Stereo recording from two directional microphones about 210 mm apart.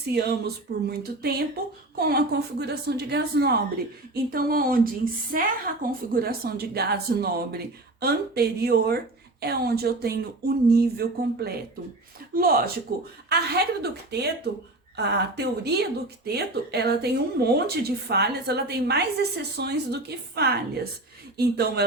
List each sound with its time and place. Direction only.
0.0 s speech: 50° right (ahead or behind)
13.3 s speech: 50° right (ahead or behind)